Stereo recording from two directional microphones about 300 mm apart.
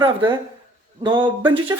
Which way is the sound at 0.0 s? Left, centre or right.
Centre.